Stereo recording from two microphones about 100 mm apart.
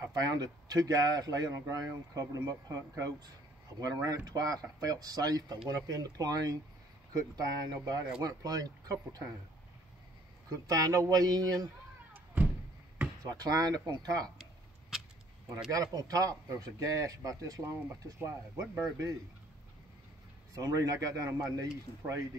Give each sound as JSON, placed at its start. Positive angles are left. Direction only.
{"t": 0.0, "sound": "speech", "side_deg": -40}
{"t": 10.5, "sound": "speech", "side_deg": -35}
{"t": 13.2, "sound": "speech", "side_deg": -40}
{"t": 14.4, "sound": "a sound", "side_deg": -5}
{"t": 15.7, "sound": "speech", "side_deg": -40}
{"t": 20.5, "sound": "speech", "side_deg": -35}